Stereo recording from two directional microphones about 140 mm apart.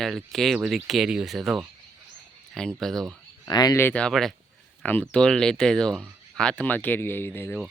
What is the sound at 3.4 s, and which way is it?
Speech, 25° left (ahead or behind).